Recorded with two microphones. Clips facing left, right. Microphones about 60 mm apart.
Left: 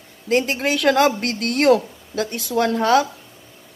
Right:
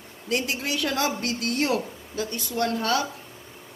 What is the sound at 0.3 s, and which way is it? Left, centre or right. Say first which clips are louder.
Speech: left 8 dB; left.